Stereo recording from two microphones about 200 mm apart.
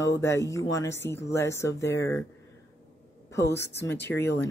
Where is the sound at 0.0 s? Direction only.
15° left (ahead or behind).